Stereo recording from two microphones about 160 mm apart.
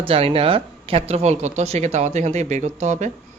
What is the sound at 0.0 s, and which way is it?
Speech, 35° right (ahead or behind).